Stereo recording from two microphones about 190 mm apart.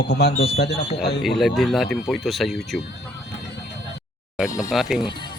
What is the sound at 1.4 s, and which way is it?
Speech, centre (ahead or behind).